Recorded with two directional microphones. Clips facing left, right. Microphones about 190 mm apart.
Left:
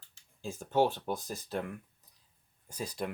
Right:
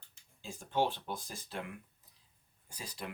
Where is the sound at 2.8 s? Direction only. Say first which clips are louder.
Left 8 dB; 45° left (ahead or behind).